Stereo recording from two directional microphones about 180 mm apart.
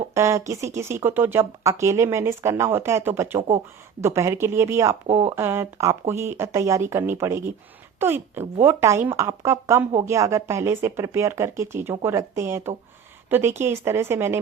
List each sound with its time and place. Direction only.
0.1 s speech: 15° right (ahead or behind)